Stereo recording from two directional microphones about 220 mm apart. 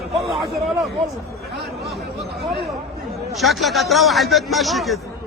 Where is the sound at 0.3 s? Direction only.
Centre (ahead or behind).